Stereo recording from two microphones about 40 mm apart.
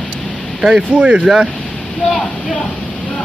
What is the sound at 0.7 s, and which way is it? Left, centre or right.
Speech, right.